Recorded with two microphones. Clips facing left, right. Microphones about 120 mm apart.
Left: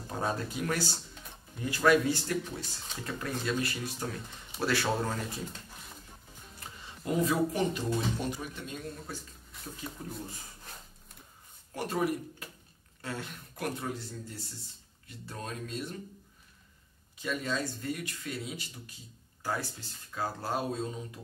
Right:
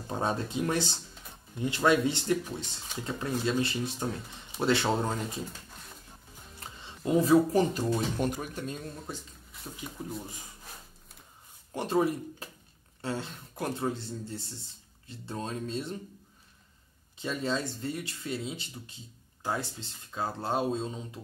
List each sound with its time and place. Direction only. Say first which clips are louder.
0.1 s speech: right 3 dB; 25° right (ahead or behind)
7.2 s speech: right 8 dB; 35° right (ahead or behind)
8.2 s speech: right 5 dB; 50° right (ahead or behind)
10.0 s speech: right 6 dB; 5° right (ahead or behind)
11.7 s speech: right 4 dB; 25° right (ahead or behind)
17.2 s speech: right 2 dB; 30° right (ahead or behind)